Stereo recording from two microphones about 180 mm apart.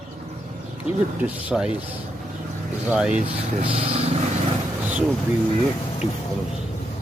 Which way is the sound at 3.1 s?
35° right (ahead or behind).